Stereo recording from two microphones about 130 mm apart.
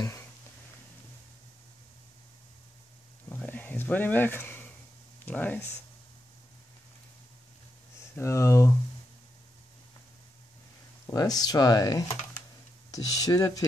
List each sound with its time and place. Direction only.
3.3 s a sound: 15° left (ahead or behind)
5.2 s speech: 15° left (ahead or behind)
8.2 s speech: 20° left (ahead or behind)
11.1 s speech: 30° left (ahead or behind)